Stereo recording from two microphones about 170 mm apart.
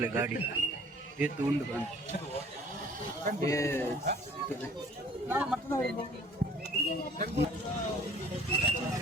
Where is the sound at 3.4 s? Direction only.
20° left (ahead or behind).